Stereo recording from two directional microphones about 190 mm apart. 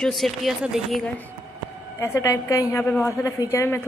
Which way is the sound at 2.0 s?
15° left (ahead or behind).